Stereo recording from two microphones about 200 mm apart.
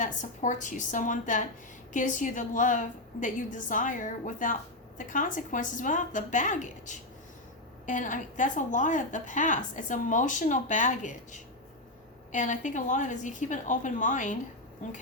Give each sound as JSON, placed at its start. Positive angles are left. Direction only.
{"t": 0.0, "sound": "a woman's voice", "side_deg": 40}